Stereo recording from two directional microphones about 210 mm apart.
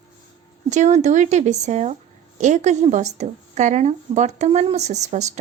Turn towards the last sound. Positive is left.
turn(degrees=-35)  # may be behind; listen again after turning